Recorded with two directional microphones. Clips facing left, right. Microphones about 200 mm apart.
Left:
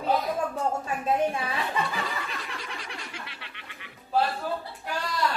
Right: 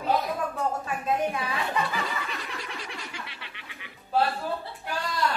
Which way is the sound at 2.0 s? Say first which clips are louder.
Right 1 dB; centre (ahead or behind).